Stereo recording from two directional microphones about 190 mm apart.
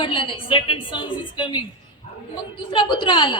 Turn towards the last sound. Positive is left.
turn(degrees=25)  # may be behind; listen again after turning